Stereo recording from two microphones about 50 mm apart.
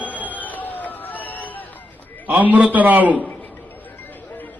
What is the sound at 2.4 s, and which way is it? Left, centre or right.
Speech, right.